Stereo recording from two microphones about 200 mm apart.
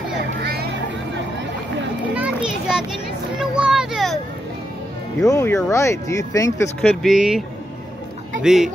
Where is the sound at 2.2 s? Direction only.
5° right (ahead or behind).